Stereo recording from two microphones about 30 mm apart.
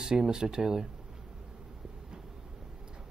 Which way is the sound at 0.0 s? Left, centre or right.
Right.